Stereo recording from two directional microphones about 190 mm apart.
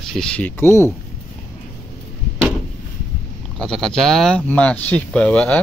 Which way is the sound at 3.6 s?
5° left (ahead or behind).